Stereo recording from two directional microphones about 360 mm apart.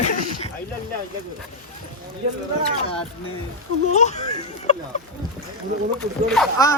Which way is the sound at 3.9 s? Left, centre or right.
Centre.